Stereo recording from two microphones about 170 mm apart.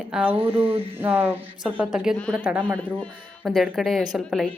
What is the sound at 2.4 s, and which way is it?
Speech, 10° right (ahead or behind).